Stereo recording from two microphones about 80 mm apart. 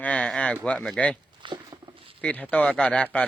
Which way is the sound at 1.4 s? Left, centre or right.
Right.